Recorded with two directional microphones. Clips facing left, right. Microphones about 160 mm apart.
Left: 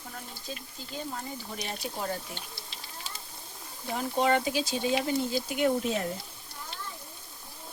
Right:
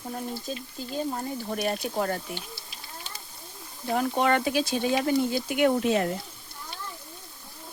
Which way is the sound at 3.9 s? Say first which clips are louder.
Right 2 dB; 60° right (ahead or behind).